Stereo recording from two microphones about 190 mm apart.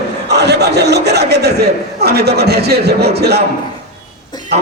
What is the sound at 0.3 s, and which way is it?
A man's voice, 60° right (ahead or behind).